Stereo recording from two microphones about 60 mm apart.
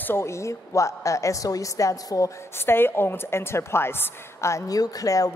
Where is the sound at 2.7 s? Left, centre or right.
Left.